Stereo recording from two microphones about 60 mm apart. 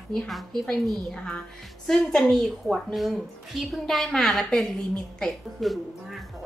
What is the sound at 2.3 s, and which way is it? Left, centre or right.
A woman's voice, centre.